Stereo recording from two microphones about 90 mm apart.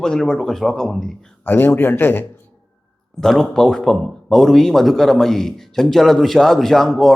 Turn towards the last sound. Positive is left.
turn(degrees=5)  # may be behind; listen again after turning